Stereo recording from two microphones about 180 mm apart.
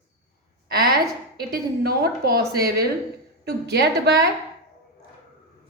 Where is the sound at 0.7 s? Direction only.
60° right (ahead or behind).